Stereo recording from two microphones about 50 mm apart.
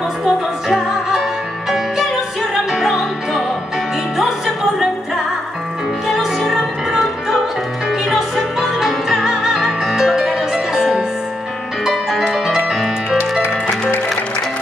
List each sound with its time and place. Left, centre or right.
0.2 s music: centre
2.7 s music: centre
6.0 s music: centre